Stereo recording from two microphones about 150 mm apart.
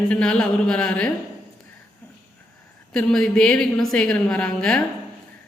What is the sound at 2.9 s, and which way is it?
Speech, 5° left (ahead or behind).